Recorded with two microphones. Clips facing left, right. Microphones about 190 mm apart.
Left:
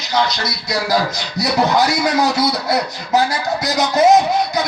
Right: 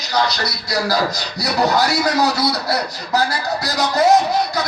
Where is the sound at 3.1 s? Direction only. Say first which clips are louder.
Left 3 dB; 20° left (ahead or behind).